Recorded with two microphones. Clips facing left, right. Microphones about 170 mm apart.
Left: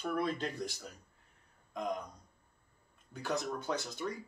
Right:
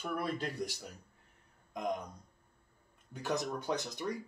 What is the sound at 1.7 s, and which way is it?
Speech, 15° right (ahead or behind).